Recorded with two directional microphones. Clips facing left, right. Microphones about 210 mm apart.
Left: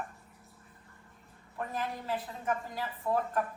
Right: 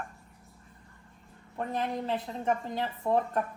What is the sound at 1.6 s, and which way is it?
A woman's voice, 25° right (ahead or behind).